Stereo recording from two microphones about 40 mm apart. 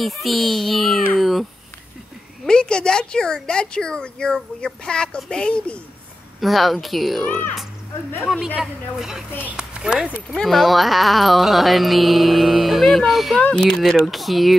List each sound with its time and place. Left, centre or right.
0.0 s speech: centre
2.4 s a woman's voice: centre
6.4 s speech: centre
7.2 s speech: left
9.6 s speech: centre
10.3 s speech: centre
13.4 s a woman's voice: left
13.7 s speech: centre
14.0 s speech: centre